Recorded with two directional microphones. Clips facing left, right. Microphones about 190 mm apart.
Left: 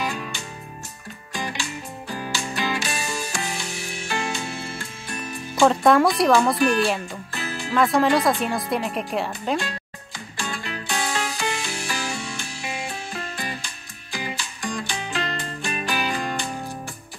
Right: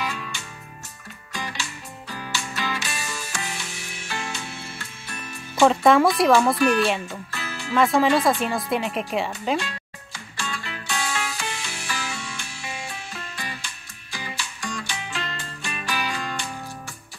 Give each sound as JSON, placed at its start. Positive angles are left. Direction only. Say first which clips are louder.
{"t": 0.0, "sound": "music", "louder": "left 3 dB", "side_deg": 40}
{"t": 1.6, "sound": "music", "louder": "left 4 dB", "side_deg": 40}
{"t": 5.6, "sound": "speech", "louder": "even", "side_deg": 0}
{"t": 7.3, "sound": "music", "louder": "left 6 dB", "side_deg": 45}
{"t": 7.7, "sound": "speech", "louder": "even", "side_deg": 0}
{"t": 9.6, "sound": "music", "louder": "left 1 dB", "side_deg": 40}